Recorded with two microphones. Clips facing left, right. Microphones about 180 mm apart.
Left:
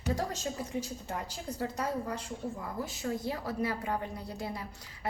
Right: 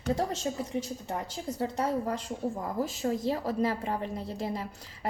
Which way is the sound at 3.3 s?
35° right (ahead or behind).